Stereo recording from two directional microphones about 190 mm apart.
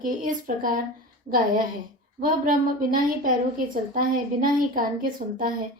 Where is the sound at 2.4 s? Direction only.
45° right (ahead or behind).